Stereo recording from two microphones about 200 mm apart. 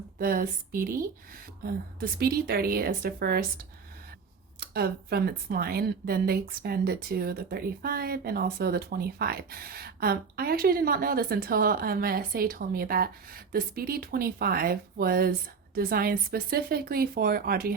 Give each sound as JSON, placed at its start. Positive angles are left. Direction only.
{"t": 0.2, "sound": "speech", "side_deg": -45}
{"t": 4.6, "sound": "speech", "side_deg": -50}